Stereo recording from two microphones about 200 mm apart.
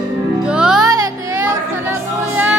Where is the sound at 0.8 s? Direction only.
20° right (ahead or behind).